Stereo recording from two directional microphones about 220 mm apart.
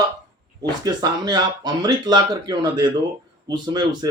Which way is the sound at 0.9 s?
20° right (ahead or behind).